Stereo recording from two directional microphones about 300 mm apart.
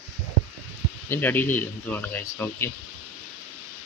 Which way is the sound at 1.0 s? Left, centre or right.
Centre.